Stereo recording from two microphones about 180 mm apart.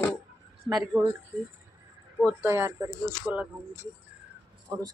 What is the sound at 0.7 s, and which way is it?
Speech, centre (ahead or behind).